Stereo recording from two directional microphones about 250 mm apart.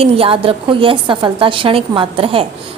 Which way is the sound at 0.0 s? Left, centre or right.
Right.